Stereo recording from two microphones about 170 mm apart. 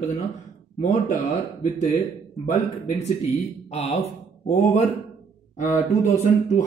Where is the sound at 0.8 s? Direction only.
45° left (ahead or behind).